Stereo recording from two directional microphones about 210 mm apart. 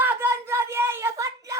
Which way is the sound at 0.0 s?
10° right (ahead or behind).